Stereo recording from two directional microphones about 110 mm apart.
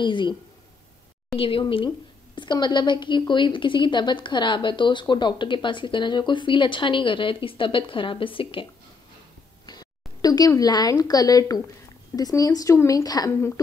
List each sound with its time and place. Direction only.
0.0 s a woman's voice: 45° left (ahead or behind)
9.7 s speech: 35° left (ahead or behind)